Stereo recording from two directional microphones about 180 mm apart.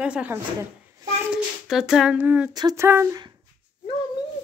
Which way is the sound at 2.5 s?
20° right (ahead or behind).